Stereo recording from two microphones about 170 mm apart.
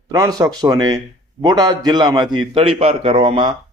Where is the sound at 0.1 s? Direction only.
20° right (ahead or behind).